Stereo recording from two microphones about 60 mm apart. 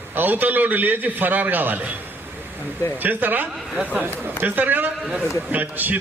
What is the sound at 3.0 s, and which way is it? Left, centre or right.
A man's voice, right.